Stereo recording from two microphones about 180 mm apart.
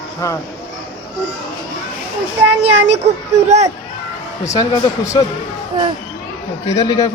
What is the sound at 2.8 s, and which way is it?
Speech, 35° right (ahead or behind).